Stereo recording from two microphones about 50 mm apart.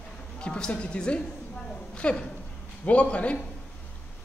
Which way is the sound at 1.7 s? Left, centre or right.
Left.